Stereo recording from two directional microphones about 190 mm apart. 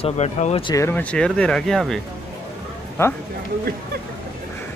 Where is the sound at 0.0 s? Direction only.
35° left (ahead or behind).